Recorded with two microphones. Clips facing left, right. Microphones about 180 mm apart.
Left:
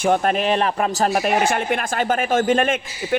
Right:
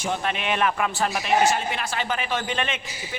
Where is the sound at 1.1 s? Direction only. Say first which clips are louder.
Left 3 dB; 55° left (ahead or behind).